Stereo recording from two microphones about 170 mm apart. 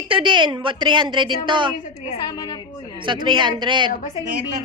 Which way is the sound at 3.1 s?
30° right (ahead or behind).